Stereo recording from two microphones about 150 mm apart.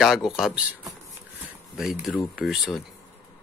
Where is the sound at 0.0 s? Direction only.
Centre (ahead or behind).